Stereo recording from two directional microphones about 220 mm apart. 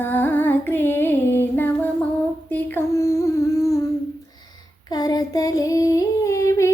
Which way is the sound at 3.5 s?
15° left (ahead or behind).